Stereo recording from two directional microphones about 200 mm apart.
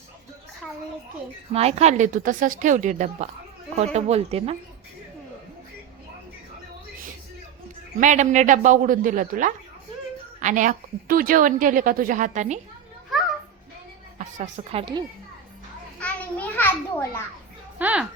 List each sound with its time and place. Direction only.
1.5 s a woman's voice: 30° right (ahead or behind)
7.9 s a woman's voice: 40° right (ahead or behind)
14.2 s a woman's voice: 35° right (ahead or behind)
16.0 s a sound: 5° left (ahead or behind)
17.7 s speech: 5° right (ahead or behind)